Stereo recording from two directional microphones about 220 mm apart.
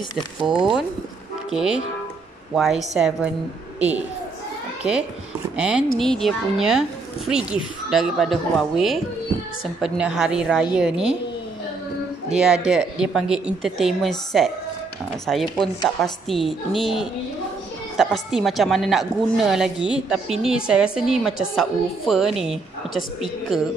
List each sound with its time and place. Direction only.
0.5 s a woman's voice: 5° right (ahead or behind)
5.6 s a woman's voice: 5° right (ahead or behind)
12.4 s a woman's voice: centre (ahead or behind)